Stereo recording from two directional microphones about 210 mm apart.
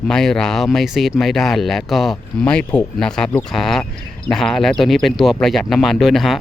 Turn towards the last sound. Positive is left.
turn(degrees=0)  # may be behind; listen again after turning